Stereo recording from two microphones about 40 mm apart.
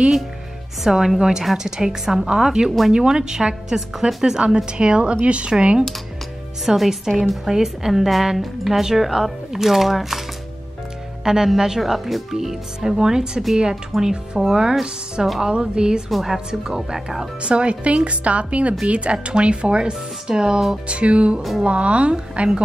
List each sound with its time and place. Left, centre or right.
0.8 s speech: centre
6.6 s a woman's voice: centre
11.2 s speech: centre
13.9 s a woman's voice: centre
14.5 s speech: centre
16.1 s a woman's voice: centre
16.4 s speech: centre
17.4 s speech: right
20.9 s speech: right
21.4 s a woman's voice: centre
21.6 s speech: right